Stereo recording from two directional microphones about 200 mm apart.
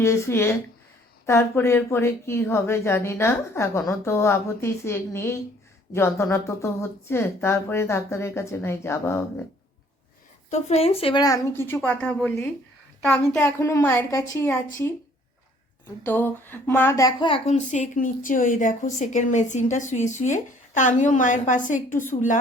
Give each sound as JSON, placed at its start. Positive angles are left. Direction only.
{"t": 0.0, "sound": "a woman's voice", "side_deg": 15}
{"t": 10.5, "sound": "a woman's voice", "side_deg": 30}
{"t": 16.0, "sound": "speech", "side_deg": 10}